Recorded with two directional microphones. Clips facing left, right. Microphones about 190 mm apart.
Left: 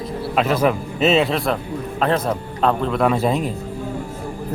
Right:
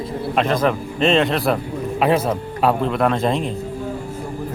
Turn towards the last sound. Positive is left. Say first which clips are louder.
# even
turn(degrees=5)  # may be behind; listen again after turning